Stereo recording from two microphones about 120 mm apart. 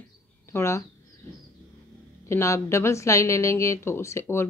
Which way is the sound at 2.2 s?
25° left (ahead or behind).